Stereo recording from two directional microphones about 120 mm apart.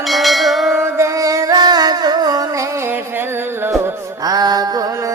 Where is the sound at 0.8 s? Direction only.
25° right (ahead or behind).